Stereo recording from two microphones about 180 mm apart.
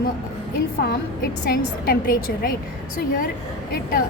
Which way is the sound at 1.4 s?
60° left (ahead or behind).